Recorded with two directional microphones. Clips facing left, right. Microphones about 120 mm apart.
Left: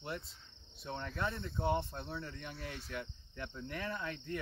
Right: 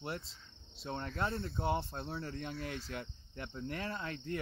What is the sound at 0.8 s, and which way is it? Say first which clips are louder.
Speech: right 2 dB; 25° right (ahead or behind).